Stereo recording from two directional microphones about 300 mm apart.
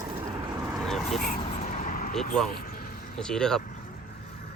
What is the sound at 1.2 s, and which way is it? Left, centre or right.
Vehicle, left.